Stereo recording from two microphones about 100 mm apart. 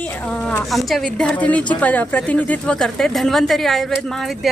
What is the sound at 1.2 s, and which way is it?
Speech, 15° left (ahead or behind).